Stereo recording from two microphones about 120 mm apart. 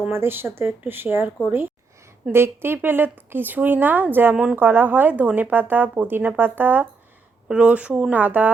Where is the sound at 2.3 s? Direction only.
20° right (ahead or behind).